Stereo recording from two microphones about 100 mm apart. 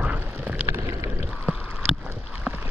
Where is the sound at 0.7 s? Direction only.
35° right (ahead or behind).